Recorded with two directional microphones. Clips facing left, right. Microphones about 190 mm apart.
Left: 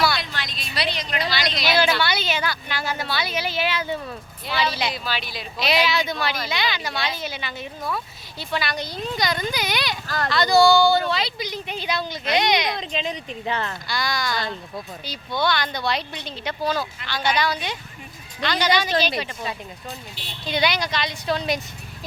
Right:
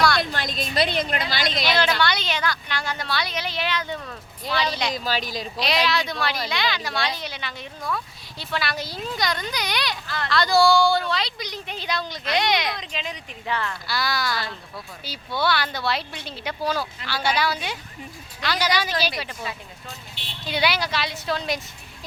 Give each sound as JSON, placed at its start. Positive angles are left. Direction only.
{"t": 0.2, "sound": "a woman's voice", "side_deg": -50}
{"t": 1.6, "sound": "speech", "side_deg": 5}
{"t": 4.9, "sound": "speech", "side_deg": -40}
{"t": 5.5, "sound": "speech", "side_deg": 5}
{"t": 12.7, "sound": "speech", "side_deg": 25}
{"t": 13.8, "sound": "speech", "side_deg": -5}
{"t": 20.5, "sound": "speech", "side_deg": -5}